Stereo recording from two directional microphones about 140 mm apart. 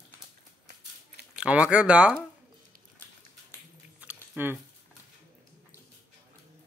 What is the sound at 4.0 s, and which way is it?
Biting, 10° right (ahead or behind).